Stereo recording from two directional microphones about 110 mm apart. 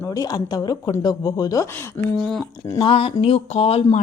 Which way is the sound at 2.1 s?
5° left (ahead or behind).